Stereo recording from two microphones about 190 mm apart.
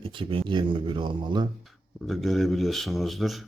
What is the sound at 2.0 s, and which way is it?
Speech, centre (ahead or behind).